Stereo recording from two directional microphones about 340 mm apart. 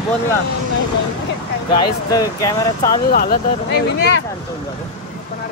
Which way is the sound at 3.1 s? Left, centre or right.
Left.